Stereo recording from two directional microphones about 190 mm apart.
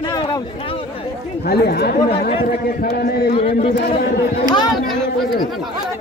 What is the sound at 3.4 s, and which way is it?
Speech, 30° left (ahead or behind).